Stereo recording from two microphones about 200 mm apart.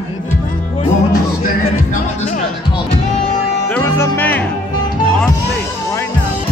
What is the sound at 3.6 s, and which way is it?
Music, 10° left (ahead or behind).